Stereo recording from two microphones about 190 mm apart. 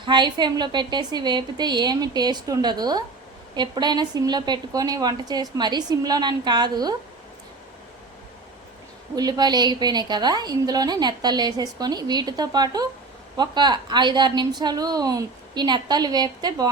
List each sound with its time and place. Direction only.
0.0 s a woman's voice: 25° right (ahead or behind)
9.1 s a woman's voice: 20° right (ahead or behind)